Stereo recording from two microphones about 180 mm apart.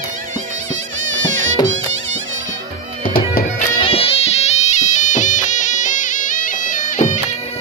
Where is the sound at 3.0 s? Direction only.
50° left (ahead or behind).